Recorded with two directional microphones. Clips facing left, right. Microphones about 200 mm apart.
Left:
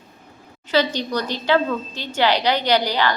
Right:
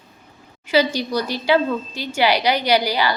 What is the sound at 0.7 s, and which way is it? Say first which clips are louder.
A woman's voice: right 2 dB; 10° right (ahead or behind).